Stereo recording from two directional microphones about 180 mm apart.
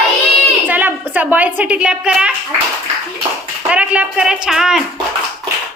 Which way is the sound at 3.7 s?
5° right (ahead or behind).